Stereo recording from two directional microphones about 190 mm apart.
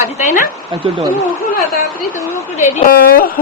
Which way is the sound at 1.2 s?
50° left (ahead or behind).